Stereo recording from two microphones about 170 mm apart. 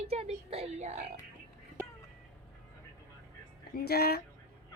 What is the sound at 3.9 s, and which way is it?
Speech, 65° left (ahead or behind).